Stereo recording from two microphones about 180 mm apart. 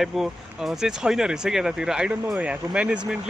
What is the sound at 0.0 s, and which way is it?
Speech, centre (ahead or behind).